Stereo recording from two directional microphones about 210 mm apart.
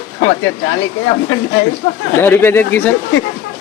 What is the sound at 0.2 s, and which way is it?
Speech, 65° left (ahead or behind).